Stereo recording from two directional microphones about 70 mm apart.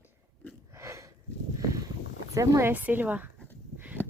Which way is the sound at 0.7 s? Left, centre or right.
Right.